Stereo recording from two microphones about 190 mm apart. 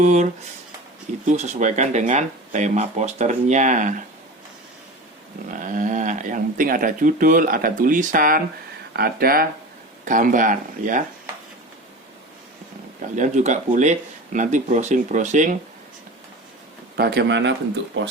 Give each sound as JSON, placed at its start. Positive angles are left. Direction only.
{"t": 0.0, "sound": "speech", "side_deg": -40}
{"t": 1.3, "sound": "speech", "side_deg": -40}
{"t": 5.5, "sound": "speech", "side_deg": -45}
{"t": 13.1, "sound": "speech", "side_deg": -40}
{"t": 17.0, "sound": "a man's voice", "side_deg": -60}